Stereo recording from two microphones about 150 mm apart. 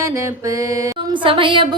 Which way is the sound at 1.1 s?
35° right (ahead or behind).